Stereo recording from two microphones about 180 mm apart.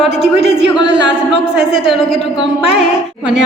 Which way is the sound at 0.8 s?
75° right (ahead or behind).